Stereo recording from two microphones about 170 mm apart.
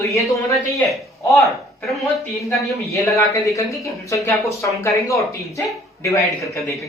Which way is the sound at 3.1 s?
20° left (ahead or behind).